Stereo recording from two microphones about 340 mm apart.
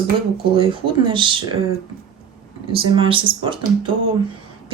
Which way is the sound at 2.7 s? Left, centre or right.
Centre.